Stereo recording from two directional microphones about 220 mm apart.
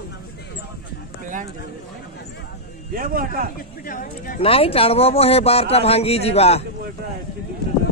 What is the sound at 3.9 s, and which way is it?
Speech, 40° left (ahead or behind).